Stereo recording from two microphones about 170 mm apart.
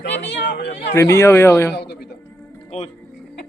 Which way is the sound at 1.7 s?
75° left (ahead or behind).